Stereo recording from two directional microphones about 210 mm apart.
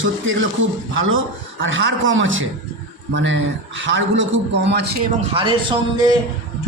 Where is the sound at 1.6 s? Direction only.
65° right (ahead or behind).